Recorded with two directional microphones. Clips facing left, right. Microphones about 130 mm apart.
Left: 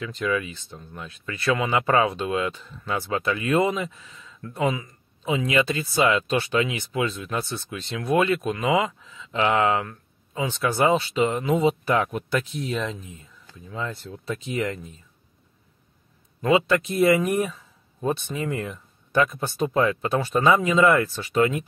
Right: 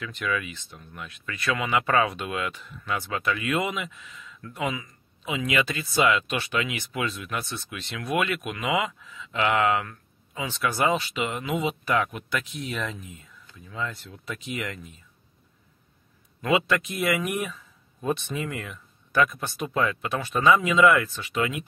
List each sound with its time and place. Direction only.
0.0 s speech: 30° left (ahead or behind)
16.3 s speech: 30° left (ahead or behind)